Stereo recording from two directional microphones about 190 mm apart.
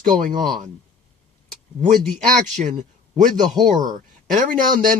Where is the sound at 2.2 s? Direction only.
40° right (ahead or behind).